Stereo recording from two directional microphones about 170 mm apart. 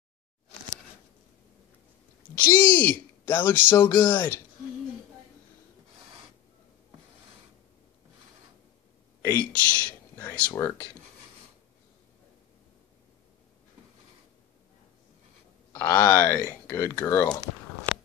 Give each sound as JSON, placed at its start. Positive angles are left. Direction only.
{"t": 2.3, "sound": "speech", "side_deg": 10}
{"t": 9.2, "sound": "a sound", "side_deg": 15}
{"t": 10.5, "sound": "speech", "side_deg": 15}
{"t": 15.7, "sound": "speech", "side_deg": 15}